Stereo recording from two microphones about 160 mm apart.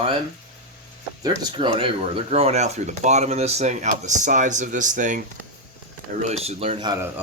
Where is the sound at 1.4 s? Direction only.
30° right (ahead or behind); by 5.2 s 55° right (ahead or behind).